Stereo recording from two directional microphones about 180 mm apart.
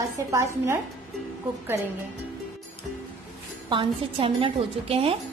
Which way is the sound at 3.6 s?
25° right (ahead or behind).